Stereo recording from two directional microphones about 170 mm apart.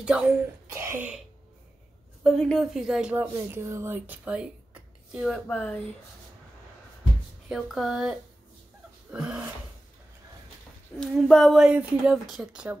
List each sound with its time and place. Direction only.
0.0 s a woman's voice: 5° right (ahead or behind)
0.7 s throat clearing: 15° right (ahead or behind)
2.2 s a woman's voice: centre (ahead or behind)
5.5 s speech: 10° left (ahead or behind)
7.4 s a woman's voice: centre (ahead or behind)
11.0 s a woman's voice: 5° left (ahead or behind)